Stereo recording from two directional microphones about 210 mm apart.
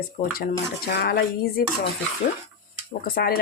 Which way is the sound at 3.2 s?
45° left (ahead or behind).